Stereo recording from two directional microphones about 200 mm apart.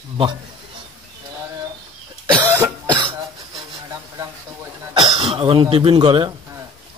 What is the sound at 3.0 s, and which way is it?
Throat clearing, 20° right (ahead or behind).